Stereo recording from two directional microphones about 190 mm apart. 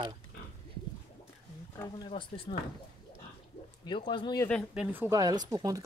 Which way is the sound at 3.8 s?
25° left (ahead or behind).